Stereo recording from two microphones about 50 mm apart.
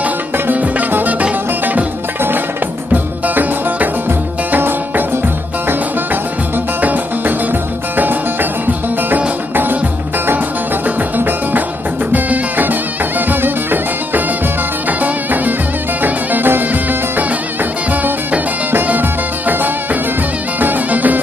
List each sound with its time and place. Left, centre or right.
0.5 s music: right
2.9 s music: right
6.8 s music: right
11.1 s music: right
18.9 s music: right